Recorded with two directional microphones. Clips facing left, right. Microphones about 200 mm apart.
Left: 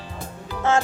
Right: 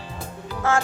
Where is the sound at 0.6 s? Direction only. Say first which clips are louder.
Left 2 dB; 20° left (ahead or behind).